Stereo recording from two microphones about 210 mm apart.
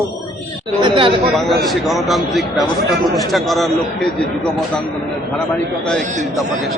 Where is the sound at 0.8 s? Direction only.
25° right (ahead or behind).